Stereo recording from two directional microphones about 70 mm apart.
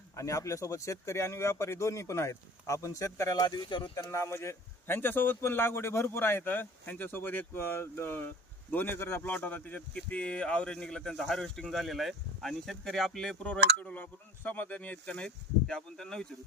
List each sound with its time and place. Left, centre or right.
0.2 s speech: left
3.4 s speech: left
4.0 s a man's voice: left; by 13.3 s centre
13.4 s speech: centre